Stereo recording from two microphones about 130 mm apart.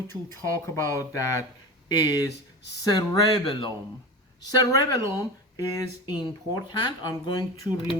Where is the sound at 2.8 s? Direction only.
30° left (ahead or behind).